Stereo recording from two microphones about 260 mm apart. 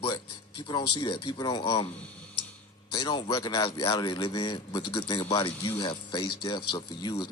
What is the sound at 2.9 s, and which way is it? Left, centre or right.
Speech, centre.